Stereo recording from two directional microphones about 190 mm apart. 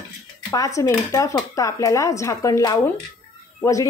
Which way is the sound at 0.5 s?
15° left (ahead or behind).